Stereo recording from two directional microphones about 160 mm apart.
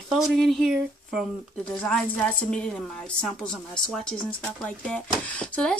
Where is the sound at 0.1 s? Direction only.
Centre (ahead or behind).